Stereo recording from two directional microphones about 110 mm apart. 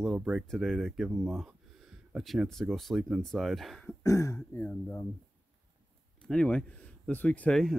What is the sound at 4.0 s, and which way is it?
Speech, 30° left (ahead or behind).